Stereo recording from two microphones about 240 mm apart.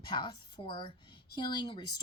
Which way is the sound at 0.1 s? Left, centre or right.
Centre.